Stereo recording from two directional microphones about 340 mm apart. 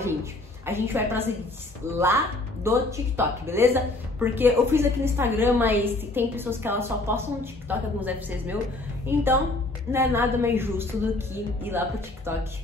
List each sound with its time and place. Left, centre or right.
0.0 s a woman's voice: centre
2.6 s a woman's voice: centre
12.3 s speech: centre